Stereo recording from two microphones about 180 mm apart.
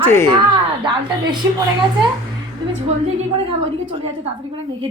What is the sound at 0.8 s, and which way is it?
Speech, 25° right (ahead or behind).